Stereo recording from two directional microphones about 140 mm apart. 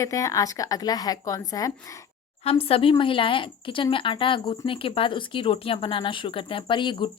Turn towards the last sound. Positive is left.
turn(degrees=35)  # may be behind; listen again after turning